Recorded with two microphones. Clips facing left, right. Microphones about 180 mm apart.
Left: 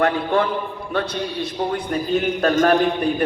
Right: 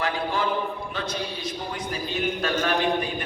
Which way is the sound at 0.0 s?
60° left (ahead or behind).